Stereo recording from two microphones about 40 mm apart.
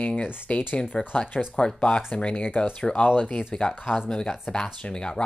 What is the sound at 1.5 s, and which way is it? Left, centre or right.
Speech, left.